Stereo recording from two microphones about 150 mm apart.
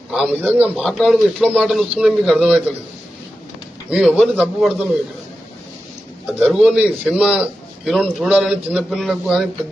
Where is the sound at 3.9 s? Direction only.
5° right (ahead or behind).